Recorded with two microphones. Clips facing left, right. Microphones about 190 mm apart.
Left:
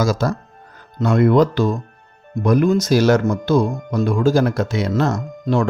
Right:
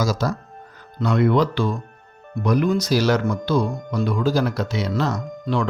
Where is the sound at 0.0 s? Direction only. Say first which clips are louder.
Left 4 dB; 50° left (ahead or behind).